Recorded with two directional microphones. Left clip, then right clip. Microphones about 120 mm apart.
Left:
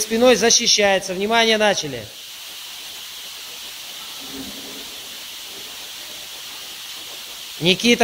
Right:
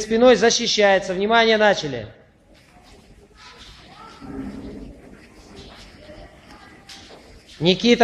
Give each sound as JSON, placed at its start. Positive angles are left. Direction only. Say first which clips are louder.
{"t": 0.1, "sound": "a man's voice", "louder": "even", "side_deg": 20}
{"t": 7.6, "sound": "speech", "louder": "left 1 dB", "side_deg": 15}